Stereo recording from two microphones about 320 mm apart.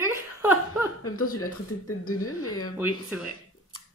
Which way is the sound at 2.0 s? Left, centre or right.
Left.